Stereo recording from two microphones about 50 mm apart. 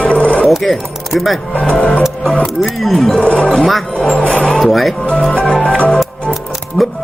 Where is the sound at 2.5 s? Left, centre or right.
Centre.